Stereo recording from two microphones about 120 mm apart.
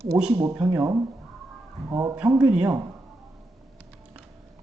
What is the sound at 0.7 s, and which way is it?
Speech, 30° right (ahead or behind).